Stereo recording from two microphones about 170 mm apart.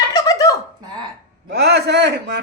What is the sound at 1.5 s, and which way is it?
Speech, 80° right.